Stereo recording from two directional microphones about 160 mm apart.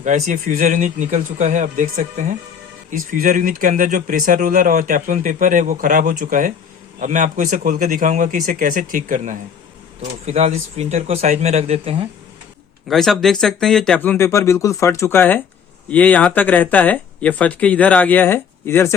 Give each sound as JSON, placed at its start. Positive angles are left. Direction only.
{"t": 0.0, "sound": "speech", "side_deg": -50}
{"t": 12.9, "sound": "speech", "side_deg": 0}